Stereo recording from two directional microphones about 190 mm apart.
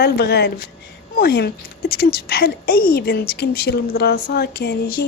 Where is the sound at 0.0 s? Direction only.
60° left (ahead or behind).